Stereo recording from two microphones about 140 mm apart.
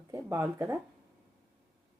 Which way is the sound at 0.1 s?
20° right (ahead or behind).